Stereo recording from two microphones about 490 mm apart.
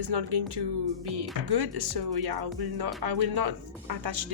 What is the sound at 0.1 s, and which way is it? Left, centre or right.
A woman's voice, right.